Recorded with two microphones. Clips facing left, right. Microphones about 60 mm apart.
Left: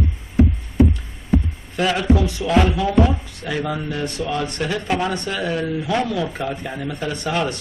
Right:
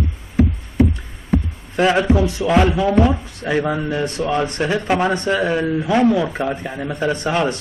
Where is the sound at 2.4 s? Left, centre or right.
Right.